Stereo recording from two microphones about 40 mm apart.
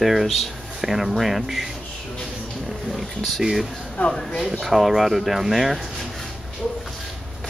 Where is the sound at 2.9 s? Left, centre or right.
Centre.